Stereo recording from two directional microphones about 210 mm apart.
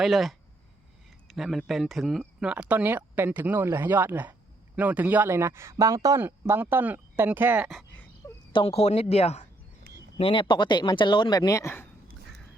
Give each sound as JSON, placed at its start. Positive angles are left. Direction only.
{"t": 0.0, "sound": "speech", "side_deg": 0}
{"t": 8.5, "sound": "speech", "side_deg": 30}